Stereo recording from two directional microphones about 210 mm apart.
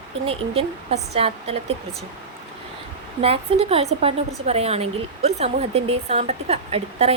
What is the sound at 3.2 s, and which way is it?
Speech, 25° right (ahead or behind).